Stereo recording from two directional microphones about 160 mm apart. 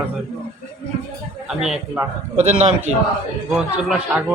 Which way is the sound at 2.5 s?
40° right (ahead or behind).